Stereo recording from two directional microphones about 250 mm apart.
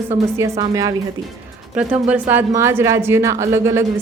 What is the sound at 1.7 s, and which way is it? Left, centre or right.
Speech, centre.